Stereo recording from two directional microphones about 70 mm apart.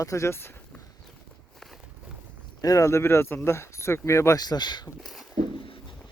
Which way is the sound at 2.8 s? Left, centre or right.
Left.